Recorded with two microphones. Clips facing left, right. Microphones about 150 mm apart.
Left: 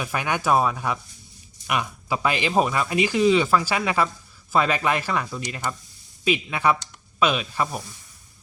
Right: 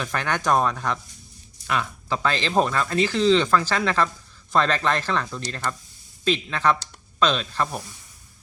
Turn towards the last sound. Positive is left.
turn(degrees=10)  # may be behind; listen again after turning